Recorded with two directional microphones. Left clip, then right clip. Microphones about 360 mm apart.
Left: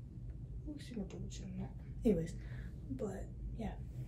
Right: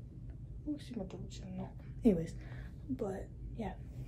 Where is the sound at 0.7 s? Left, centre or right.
Centre.